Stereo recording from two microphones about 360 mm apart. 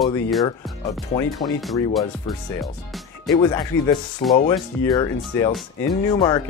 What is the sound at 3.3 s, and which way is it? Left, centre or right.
Speech, centre.